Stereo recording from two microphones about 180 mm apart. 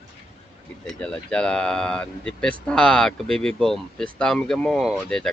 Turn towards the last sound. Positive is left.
turn(degrees=5)  # may be behind; listen again after turning